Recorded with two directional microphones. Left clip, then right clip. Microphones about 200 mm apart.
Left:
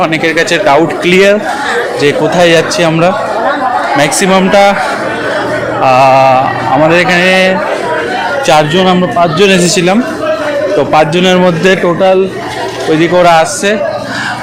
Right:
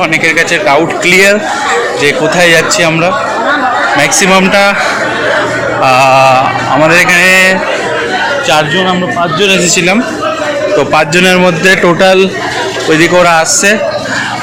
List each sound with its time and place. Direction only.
0.0 s a man's voice: 25° left (ahead or behind)
5.8 s a man's voice: 10° left (ahead or behind)
8.4 s a man's voice: 45° left (ahead or behind)
9.7 s a man's voice: 20° left (ahead or behind)
10.8 s a man's voice: 10° left (ahead or behind)
11.9 s speech: 15° right (ahead or behind)
12.9 s a man's voice: 10° left (ahead or behind)